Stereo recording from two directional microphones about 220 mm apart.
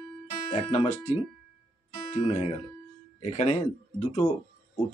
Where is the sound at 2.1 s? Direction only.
30° left (ahead or behind).